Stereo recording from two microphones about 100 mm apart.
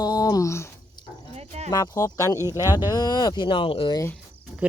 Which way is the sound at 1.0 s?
45° left (ahead or behind).